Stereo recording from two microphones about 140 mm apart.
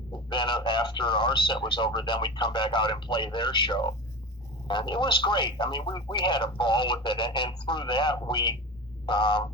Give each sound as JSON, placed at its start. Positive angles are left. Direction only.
{"t": 0.3, "sound": "speech", "side_deg": 35}